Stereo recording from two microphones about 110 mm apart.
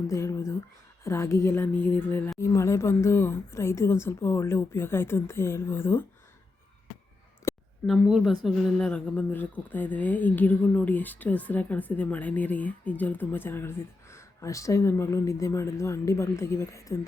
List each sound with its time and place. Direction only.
0.1 s speech: 25° left (ahead or behind)
7.5 s a sound: 30° left (ahead or behind)
7.9 s speech: 5° right (ahead or behind)
8.4 s speech: 10° left (ahead or behind); by 17.1 s 30° left (ahead or behind)